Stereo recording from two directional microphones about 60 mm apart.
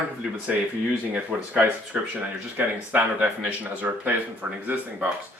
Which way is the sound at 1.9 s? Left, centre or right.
Centre.